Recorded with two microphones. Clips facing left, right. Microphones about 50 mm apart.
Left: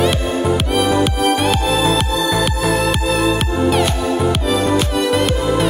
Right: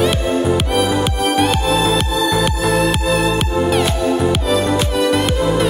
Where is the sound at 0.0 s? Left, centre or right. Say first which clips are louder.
Right 1 dB; centre.